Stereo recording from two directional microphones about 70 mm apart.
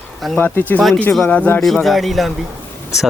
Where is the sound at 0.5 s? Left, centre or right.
Left.